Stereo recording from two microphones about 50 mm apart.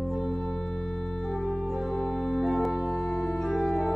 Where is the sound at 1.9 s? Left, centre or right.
Left.